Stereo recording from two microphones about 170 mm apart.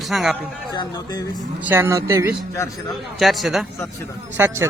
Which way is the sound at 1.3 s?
10° right (ahead or behind).